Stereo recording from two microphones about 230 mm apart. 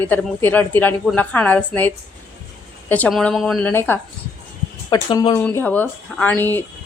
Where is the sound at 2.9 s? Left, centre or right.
Centre.